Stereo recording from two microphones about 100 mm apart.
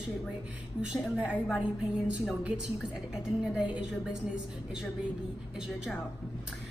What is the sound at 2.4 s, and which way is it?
A woman's voice, 10° right (ahead or behind).